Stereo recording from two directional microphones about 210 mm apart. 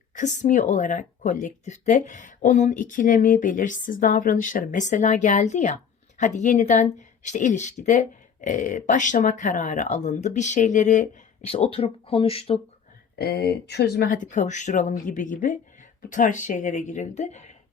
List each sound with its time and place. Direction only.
0.2 s speech: 35° left (ahead or behind)
13.1 s speech: 50° left (ahead or behind)